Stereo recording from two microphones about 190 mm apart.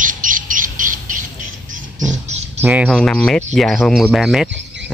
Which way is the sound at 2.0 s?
40° right (ahead or behind).